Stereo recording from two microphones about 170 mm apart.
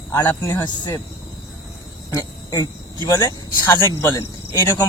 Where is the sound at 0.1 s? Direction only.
15° left (ahead or behind).